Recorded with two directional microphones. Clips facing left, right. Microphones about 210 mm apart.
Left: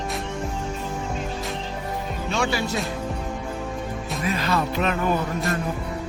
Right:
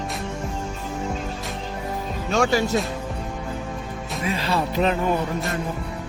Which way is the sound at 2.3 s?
45° right (ahead or behind).